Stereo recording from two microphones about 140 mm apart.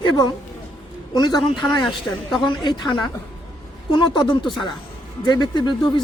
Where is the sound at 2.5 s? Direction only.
35° left (ahead or behind).